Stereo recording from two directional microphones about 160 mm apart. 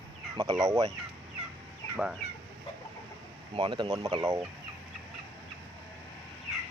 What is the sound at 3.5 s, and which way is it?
Speech, 30° right (ahead or behind).